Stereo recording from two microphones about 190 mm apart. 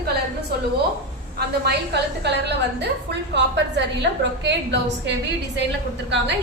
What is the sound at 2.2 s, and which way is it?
A woman's voice, 65° right (ahead or behind).